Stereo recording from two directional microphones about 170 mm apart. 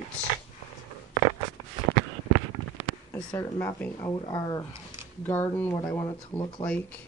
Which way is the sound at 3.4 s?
15° left (ahead or behind).